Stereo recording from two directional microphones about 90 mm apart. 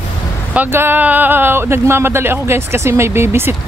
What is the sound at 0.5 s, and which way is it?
Speech, 25° right (ahead or behind).